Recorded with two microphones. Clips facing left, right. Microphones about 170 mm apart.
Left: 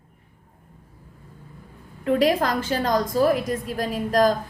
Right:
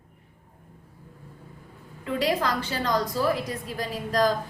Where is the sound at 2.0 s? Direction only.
50° left (ahead or behind).